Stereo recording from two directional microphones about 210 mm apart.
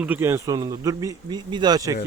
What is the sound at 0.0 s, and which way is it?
Speech, 10° right (ahead or behind).